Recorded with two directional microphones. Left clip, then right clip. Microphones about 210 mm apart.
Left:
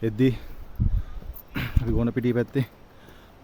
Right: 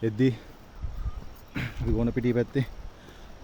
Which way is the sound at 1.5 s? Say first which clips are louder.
Left 2 dB; 20° left (ahead or behind).